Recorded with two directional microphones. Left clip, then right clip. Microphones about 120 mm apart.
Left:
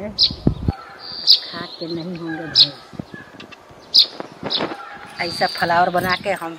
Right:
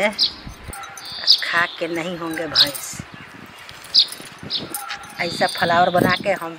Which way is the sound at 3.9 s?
15° left (ahead or behind).